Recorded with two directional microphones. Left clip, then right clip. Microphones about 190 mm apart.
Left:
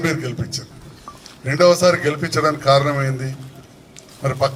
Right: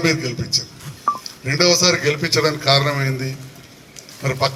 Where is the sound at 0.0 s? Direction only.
65° left (ahead or behind).